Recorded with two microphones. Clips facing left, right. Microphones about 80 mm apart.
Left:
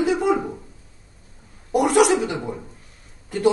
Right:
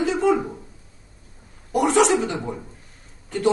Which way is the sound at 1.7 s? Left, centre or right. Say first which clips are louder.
Left 1 dB; centre.